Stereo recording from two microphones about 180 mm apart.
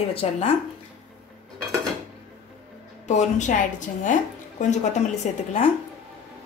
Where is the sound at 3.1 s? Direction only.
40° left (ahead or behind).